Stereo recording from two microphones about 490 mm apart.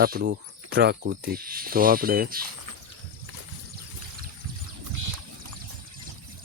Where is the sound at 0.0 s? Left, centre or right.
Centre.